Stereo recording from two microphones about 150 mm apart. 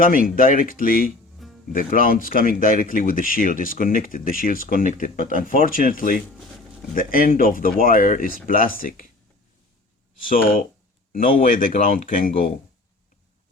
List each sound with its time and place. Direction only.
0.0 s speech: 65° left (ahead or behind)
10.2 s speech: 65° left (ahead or behind)